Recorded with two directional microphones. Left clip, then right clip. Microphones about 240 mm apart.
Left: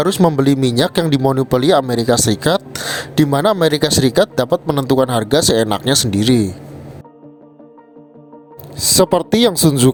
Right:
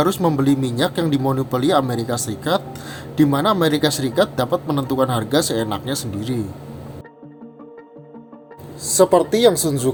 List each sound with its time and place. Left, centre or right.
0.0 s speech: left
8.7 s speech: left